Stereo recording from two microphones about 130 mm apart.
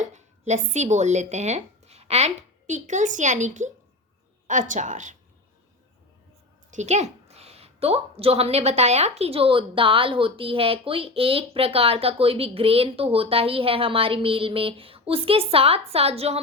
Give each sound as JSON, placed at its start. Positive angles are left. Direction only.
{"t": 0.0, "sound": "a woman's voice", "side_deg": -65}
{"t": 6.7, "sound": "a woman's voice", "side_deg": -60}